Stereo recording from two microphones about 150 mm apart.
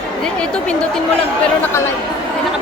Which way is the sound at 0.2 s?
5° left (ahead or behind).